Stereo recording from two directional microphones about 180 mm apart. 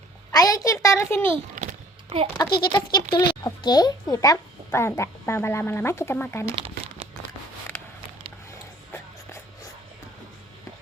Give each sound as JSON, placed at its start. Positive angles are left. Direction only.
{"t": 0.3, "sound": "speech", "side_deg": 20}
{"t": 1.5, "sound": "a sound", "side_deg": -40}
{"t": 2.6, "sound": "speech", "side_deg": 25}